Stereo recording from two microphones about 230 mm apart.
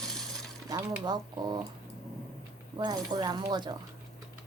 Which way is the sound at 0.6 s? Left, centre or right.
Centre.